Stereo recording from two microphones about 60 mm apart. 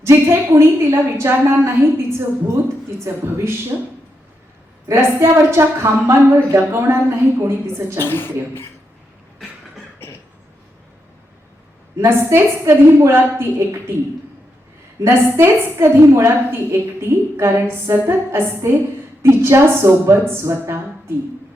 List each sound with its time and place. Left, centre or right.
0.0 s a woman's voice: right
3.7 s speech: right
4.9 s a woman's voice: right
8.0 s speech: left
11.9 s a woman's voice: right
15.0 s a woman's voice: right